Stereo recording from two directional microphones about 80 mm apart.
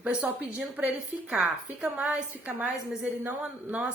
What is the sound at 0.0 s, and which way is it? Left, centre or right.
A woman's voice, centre.